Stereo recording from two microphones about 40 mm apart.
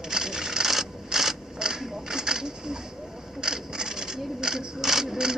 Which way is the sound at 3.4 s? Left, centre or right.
Centre.